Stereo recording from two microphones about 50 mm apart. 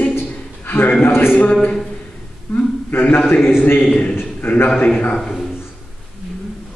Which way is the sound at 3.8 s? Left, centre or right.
Left.